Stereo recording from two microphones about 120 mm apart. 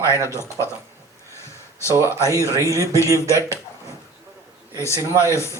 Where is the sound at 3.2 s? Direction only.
25° left (ahead or behind).